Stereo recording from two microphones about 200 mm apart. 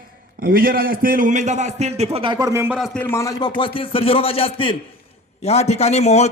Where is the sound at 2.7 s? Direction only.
Centre (ahead or behind).